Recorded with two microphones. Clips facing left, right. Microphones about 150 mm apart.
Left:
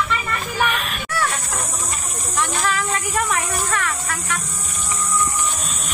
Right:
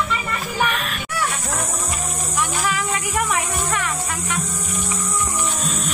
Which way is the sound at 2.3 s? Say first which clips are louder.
Left 2 dB; 10° right (ahead or behind).